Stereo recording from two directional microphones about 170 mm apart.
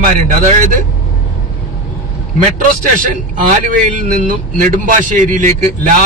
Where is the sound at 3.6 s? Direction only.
50° right (ahead or behind).